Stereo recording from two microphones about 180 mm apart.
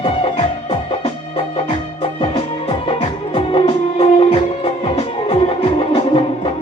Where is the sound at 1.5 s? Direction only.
30° left (ahead or behind).